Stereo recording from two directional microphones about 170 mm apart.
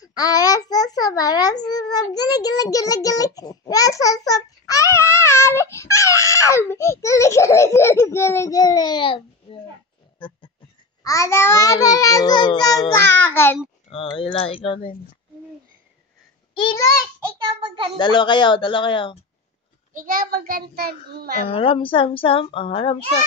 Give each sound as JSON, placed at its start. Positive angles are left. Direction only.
{"t": 0.0, "sound": "a child's voice", "side_deg": 20}
{"t": 10.1, "sound": "music", "side_deg": 30}
{"t": 11.1, "sound": "a child's voice", "side_deg": 15}
{"t": 13.8, "sound": "speech", "side_deg": 30}
{"t": 17.6, "sound": "a child's voice", "side_deg": -30}
{"t": 17.9, "sound": "a child's voice", "side_deg": 25}
{"t": 19.9, "sound": "a child's voice", "side_deg": -55}
{"t": 21.5, "sound": "speech", "side_deg": 30}